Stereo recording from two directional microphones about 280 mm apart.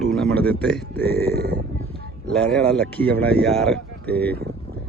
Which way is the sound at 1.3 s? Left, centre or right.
Right.